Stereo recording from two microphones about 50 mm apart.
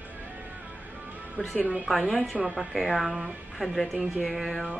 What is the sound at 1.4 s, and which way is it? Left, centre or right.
Speech, left.